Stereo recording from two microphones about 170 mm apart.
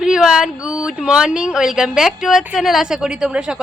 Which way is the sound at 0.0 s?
5° right (ahead or behind).